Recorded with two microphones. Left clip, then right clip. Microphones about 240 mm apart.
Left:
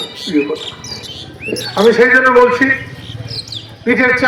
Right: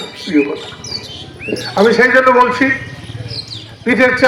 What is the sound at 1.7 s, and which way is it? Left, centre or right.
A man's voice, right.